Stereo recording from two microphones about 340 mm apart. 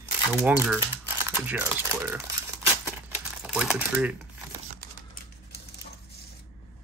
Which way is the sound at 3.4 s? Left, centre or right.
Centre.